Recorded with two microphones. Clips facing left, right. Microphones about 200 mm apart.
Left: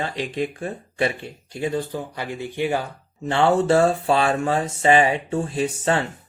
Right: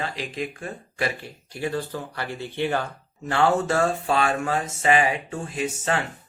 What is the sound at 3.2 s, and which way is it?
Speech, 25° left (ahead or behind).